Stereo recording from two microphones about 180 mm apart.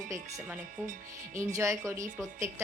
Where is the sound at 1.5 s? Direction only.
15° right (ahead or behind).